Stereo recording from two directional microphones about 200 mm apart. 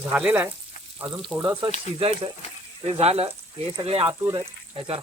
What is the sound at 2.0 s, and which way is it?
Speech, 30° right (ahead or behind).